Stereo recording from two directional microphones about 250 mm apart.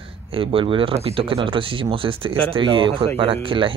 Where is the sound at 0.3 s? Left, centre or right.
Right.